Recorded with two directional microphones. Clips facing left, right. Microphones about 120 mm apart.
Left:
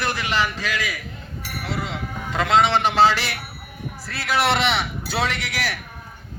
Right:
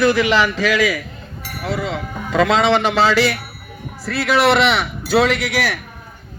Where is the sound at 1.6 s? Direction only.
65° right (ahead or behind); by 3.3 s 90° right.